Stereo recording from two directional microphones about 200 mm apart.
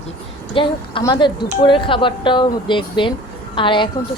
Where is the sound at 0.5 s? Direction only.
25° left (ahead or behind).